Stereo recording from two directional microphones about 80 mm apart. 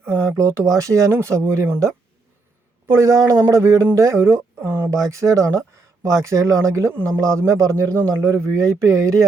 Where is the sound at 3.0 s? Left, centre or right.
Right.